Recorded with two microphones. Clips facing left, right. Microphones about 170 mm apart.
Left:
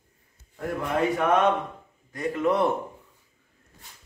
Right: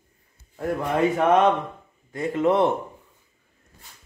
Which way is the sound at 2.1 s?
25° right (ahead or behind).